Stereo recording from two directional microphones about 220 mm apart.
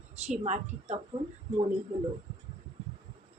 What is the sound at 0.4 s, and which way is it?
Speech, 35° right (ahead or behind).